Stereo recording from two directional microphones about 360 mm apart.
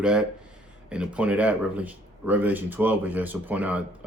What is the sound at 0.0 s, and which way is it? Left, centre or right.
Speech, centre.